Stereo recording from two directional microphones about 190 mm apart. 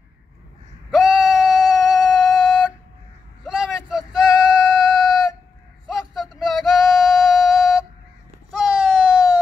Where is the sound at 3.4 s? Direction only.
5° right (ahead or behind).